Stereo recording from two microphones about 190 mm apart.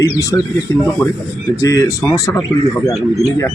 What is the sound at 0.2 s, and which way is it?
Speech, 20° left (ahead or behind).